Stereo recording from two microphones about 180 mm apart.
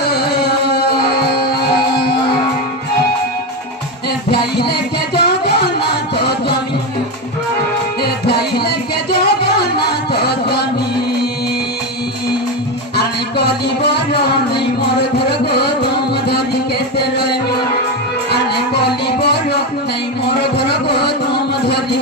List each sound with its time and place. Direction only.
0.0 s a sound: 65° left (ahead or behind)
4.3 s music: 65° left (ahead or behind)
8.0 s music: 65° left (ahead or behind)
13.9 s music: 65° left (ahead or behind)
18.3 s music: 65° left (ahead or behind)
20.5 s a sound: 65° left (ahead or behind)